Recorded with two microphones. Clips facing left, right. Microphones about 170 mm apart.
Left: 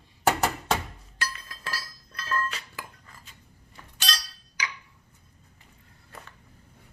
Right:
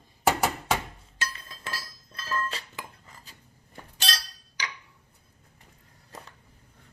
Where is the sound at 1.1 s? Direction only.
25° right (ahead or behind).